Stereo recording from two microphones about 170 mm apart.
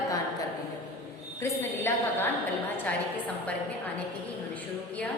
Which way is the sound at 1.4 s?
15° left (ahead or behind).